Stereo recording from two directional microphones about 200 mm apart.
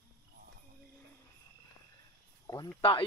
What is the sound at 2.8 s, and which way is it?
Speech, 25° left (ahead or behind).